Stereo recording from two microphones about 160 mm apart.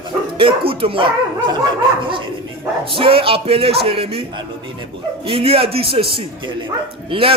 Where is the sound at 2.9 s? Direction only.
35° right (ahead or behind).